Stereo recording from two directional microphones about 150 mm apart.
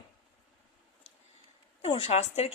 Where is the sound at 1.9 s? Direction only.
40° left (ahead or behind).